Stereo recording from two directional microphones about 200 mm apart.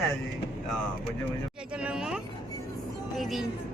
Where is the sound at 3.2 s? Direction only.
Centre (ahead or behind).